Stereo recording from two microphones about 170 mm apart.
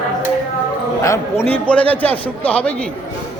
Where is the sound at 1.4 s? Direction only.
5° left (ahead or behind).